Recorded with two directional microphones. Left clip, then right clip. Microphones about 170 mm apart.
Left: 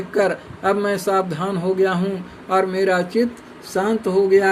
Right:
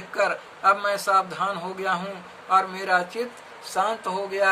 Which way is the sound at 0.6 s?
15° left (ahead or behind).